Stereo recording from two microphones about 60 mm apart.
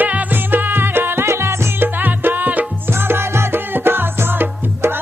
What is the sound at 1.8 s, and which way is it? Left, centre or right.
Music, right.